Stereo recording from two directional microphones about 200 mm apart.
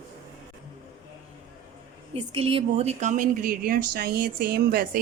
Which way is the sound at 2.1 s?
30° right (ahead or behind).